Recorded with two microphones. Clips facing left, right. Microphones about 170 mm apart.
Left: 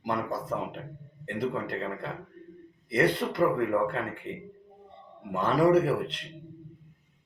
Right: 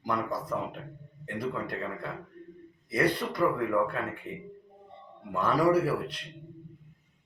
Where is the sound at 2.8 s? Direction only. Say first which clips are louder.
Left 2 dB; 25° left (ahead or behind).